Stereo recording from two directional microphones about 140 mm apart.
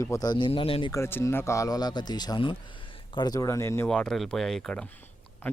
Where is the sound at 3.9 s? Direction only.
5° left (ahead or behind).